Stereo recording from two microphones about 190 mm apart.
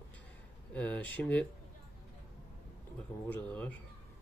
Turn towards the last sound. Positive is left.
turn(degrees=10)  # may be behind; listen again after turning